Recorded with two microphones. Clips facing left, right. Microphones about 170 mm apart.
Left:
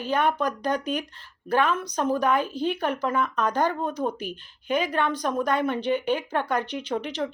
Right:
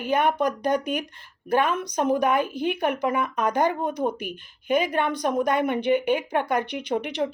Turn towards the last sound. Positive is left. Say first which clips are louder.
# right 2 dB
turn(degrees=-15)  # may be behind; listen again after turning